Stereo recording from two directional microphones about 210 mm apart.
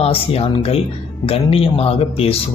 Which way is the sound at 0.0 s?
30° left (ahead or behind).